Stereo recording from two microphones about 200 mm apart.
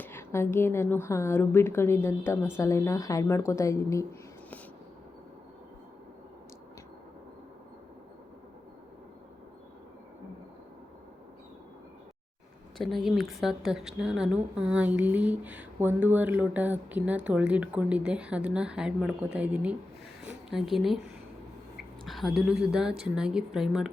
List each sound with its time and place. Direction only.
0.0 s a woman's voice: 10° left (ahead or behind)
12.7 s speech: centre (ahead or behind)